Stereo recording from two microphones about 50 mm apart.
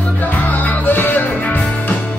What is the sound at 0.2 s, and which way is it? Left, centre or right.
Music, left.